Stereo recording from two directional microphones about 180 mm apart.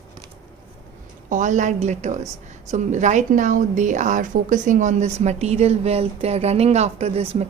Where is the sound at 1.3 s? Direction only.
45° right (ahead or behind).